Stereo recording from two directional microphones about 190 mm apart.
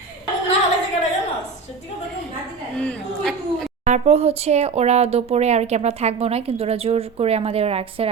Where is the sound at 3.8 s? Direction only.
35° right (ahead or behind).